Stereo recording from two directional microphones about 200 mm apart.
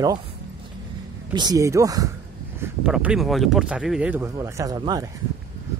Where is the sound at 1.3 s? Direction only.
20° right (ahead or behind).